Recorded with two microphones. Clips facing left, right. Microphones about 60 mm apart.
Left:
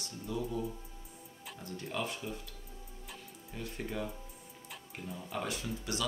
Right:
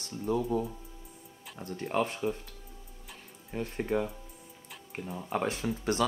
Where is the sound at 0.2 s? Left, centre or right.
Right.